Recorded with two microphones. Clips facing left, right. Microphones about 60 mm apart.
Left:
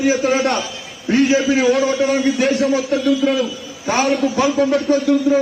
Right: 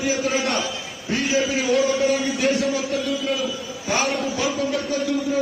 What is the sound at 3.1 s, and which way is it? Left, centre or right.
A man's voice, left.